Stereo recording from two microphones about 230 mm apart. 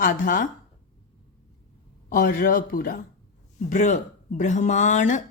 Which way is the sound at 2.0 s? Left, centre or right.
Left.